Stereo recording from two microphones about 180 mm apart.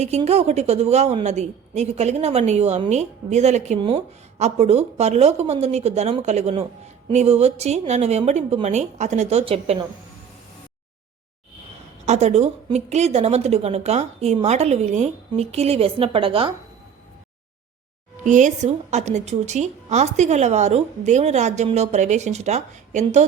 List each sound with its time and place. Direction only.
0.2 s a woman's voice: 35° right (ahead or behind)
12.0 s a woman's voice: 40° right (ahead or behind)
18.3 s a woman's voice: 45° right (ahead or behind)